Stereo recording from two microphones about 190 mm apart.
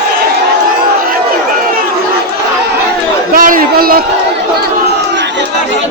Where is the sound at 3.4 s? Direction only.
45° right (ahead or behind).